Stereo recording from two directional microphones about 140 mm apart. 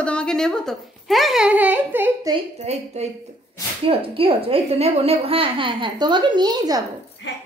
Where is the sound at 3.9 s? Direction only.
40° right (ahead or behind).